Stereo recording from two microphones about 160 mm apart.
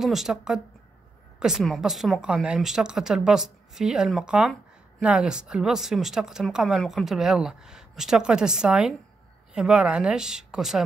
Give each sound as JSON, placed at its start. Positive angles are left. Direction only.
{"t": 0.0, "sound": "speech", "side_deg": 0}